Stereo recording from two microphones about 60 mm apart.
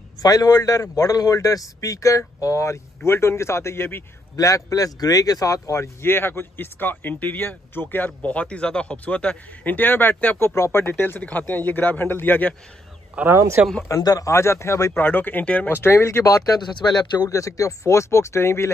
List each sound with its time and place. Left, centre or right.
0.2 s a man's voice: left
4.4 s a man's voice: left
6.0 s speech: left
8.2 s speech: left
10.5 s speech: left
13.2 s speech: right
13.8 s a man's voice: left
14.3 s speech: left
15.0 s speech: left
15.7 s speech: left
16.3 s speech: left
17.2 s speech: left